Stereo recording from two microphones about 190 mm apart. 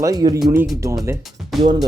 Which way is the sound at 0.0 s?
20° right (ahead or behind).